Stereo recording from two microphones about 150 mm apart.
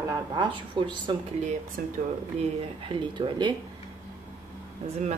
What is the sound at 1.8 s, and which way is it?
Speech, 75° right (ahead or behind).